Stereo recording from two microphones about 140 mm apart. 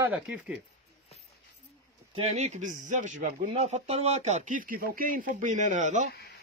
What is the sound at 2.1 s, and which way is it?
Speech, 50° right (ahead or behind).